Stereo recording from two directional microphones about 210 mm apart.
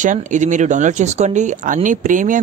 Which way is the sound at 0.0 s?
35° right (ahead or behind).